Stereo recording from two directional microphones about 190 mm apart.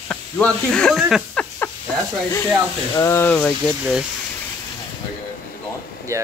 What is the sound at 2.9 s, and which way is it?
Speech, 15° left (ahead or behind).